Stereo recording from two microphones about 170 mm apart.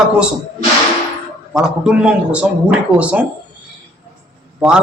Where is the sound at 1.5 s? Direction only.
5° right (ahead or behind).